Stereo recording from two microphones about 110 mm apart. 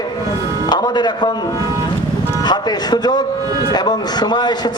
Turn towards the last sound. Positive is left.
turn(degrees=40)  # may be behind; listen again after turning